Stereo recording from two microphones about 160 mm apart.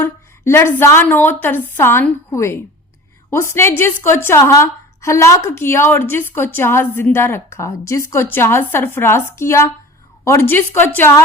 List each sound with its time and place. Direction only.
0.0 s a woman's voice: 15° left (ahead or behind)